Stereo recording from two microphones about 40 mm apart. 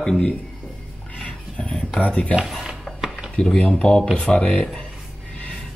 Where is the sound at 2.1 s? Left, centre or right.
Left.